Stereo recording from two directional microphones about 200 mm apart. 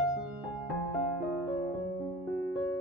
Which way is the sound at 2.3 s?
Centre (ahead or behind).